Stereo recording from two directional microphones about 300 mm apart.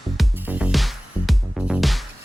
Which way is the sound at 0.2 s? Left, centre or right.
Centre.